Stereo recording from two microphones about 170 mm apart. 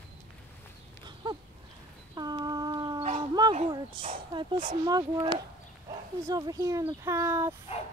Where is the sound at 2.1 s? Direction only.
25° right (ahead or behind).